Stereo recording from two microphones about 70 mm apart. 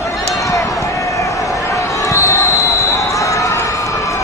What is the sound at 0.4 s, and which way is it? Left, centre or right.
Basketball bounce, left.